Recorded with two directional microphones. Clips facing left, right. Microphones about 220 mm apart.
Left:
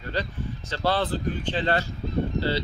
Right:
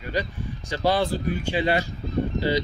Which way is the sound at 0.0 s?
15° right (ahead or behind).